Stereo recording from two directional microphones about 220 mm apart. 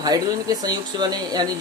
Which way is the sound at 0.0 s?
15° right (ahead or behind).